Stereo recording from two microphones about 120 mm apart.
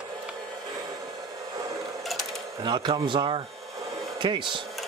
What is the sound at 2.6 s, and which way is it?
Speech, 40° right (ahead or behind).